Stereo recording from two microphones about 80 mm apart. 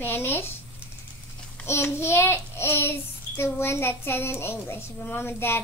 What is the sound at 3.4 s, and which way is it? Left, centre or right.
A child's voice, left.